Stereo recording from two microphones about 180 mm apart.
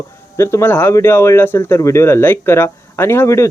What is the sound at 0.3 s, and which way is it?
Speech, 15° left (ahead or behind).